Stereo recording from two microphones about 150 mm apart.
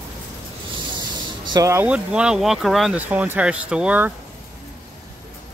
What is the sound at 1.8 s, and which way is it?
Speech, 5° right (ahead or behind).